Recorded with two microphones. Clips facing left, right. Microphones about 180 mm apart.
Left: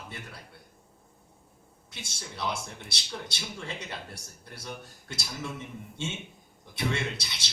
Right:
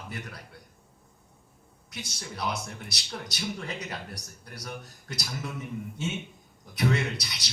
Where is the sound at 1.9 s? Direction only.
25° left (ahead or behind).